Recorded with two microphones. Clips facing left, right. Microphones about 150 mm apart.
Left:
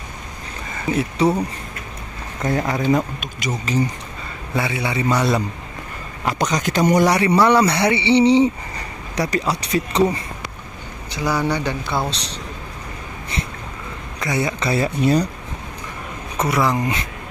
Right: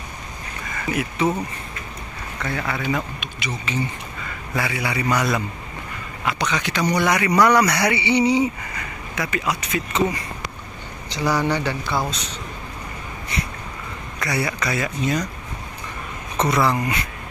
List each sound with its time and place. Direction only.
0.8 s speech: 30° left (ahead or behind)
2.4 s speech: 40° left (ahead or behind)
4.6 s speech: 25° left (ahead or behind)
6.2 s a man's voice: 40° left (ahead or behind)
7.1 s speech: 30° left (ahead or behind)
11.1 s speech: 10° left (ahead or behind); by 12.4 s 30° left (ahead or behind)
14.2 s speech: 20° left (ahead or behind)
16.3 s speech: 10° left (ahead or behind)